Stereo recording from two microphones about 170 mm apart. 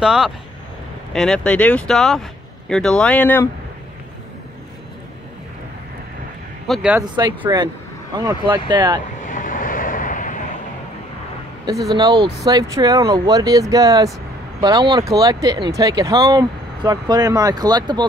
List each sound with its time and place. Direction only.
0.0 s speech: 5° right (ahead or behind)
6.7 s speech: 5° right (ahead or behind)
7.0 s speech: 25° right (ahead or behind)
9.2 s vehicle: 50° left (ahead or behind)
11.9 s speech: 25° right (ahead or behind)